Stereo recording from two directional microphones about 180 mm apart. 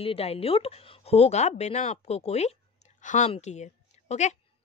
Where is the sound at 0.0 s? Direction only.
35° left (ahead or behind).